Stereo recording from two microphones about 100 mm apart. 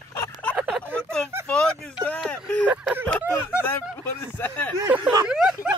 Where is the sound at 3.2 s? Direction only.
10° right (ahead or behind).